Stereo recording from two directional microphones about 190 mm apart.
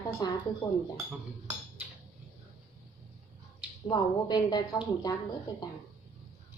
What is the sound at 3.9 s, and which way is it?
A woman's voice, 20° left (ahead or behind).